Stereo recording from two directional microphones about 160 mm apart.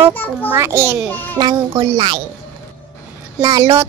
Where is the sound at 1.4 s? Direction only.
30° right (ahead or behind).